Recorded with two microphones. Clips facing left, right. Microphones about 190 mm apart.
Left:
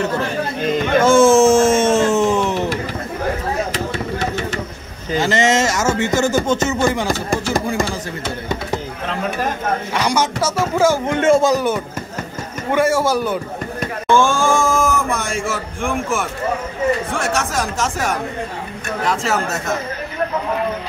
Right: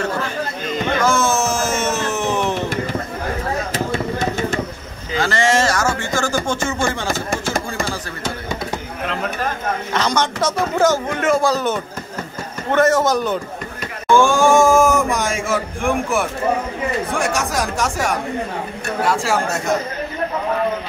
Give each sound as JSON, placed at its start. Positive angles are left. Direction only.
{"t": 1.0, "sound": "a sound", "side_deg": 30}
{"t": 5.2, "sound": "speech", "side_deg": 20}
{"t": 9.9, "sound": "speech", "side_deg": 10}
{"t": 11.1, "sound": "speech", "side_deg": 25}
{"t": 11.5, "sound": "speech", "side_deg": 10}
{"t": 14.1, "sound": "speech", "side_deg": -15}
{"t": 17.2, "sound": "speech", "side_deg": -15}